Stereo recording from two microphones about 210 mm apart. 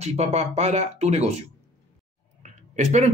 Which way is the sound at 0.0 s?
30° right (ahead or behind).